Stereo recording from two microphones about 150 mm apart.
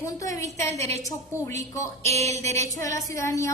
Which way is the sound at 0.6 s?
45° right (ahead or behind).